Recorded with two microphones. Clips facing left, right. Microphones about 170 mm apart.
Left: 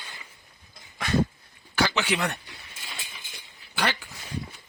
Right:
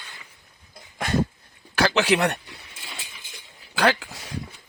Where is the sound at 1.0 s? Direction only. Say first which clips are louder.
Right 1 dB; 45° right (ahead or behind).